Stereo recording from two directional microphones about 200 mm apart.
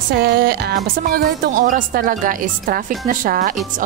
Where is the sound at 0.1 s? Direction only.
50° right (ahead or behind).